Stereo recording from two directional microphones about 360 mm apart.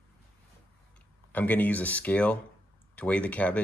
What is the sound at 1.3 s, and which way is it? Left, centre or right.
Speech, centre.